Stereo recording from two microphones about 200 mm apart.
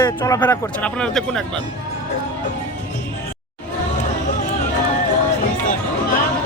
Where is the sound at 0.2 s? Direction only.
10° left (ahead or behind).